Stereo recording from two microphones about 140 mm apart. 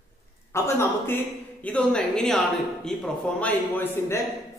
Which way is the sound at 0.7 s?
15° left (ahead or behind).